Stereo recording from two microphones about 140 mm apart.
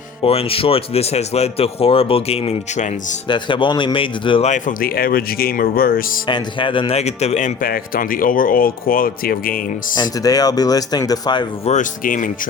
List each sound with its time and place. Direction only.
0.2 s speech: 45° left (ahead or behind)
3.2 s speech: 35° left (ahead or behind)
4.4 s speech: 65° left (ahead or behind); by 6.0 s 90° left
6.2 s speech: 35° left (ahead or behind); by 9.6 s 90° left
9.9 s speech: 30° left (ahead or behind)
11.6 s speech: 60° left (ahead or behind)